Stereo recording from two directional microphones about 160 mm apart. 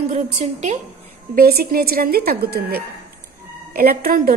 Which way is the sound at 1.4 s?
70° right (ahead or behind).